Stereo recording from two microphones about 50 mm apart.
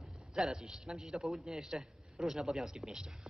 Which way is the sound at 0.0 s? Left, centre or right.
Centre.